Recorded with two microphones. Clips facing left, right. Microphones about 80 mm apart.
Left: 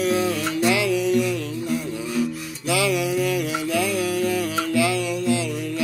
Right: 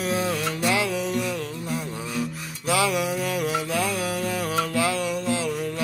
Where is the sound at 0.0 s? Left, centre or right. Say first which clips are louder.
Left 4 dB; right.